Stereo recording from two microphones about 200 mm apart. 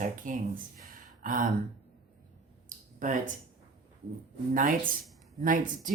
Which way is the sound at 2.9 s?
40° right (ahead or behind).